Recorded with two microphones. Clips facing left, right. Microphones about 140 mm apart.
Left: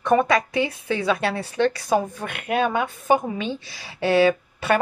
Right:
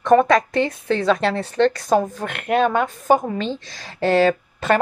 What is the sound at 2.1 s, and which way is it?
Speech, 85° right.